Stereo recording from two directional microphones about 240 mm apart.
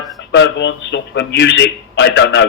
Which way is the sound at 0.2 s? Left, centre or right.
Left.